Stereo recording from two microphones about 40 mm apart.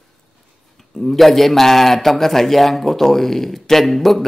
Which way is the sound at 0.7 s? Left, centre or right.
Centre.